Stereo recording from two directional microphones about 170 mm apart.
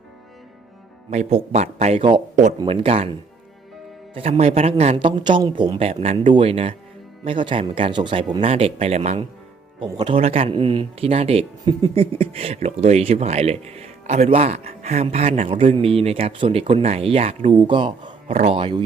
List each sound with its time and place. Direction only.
1.1 s speech: 40° right (ahead or behind)
9.8 s speech: 30° right (ahead or behind)